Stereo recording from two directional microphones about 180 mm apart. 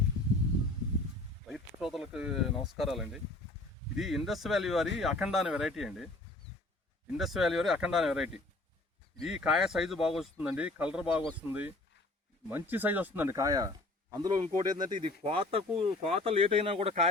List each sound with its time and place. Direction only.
1.5 s speech: centre (ahead or behind)
7.2 s speech: centre (ahead or behind); by 17.1 s 35° right (ahead or behind)